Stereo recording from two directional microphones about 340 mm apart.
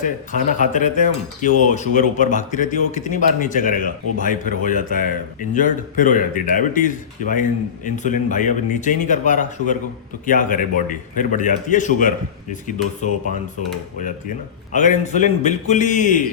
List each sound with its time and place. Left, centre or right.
0.0 s speech: left
14.7 s speech: left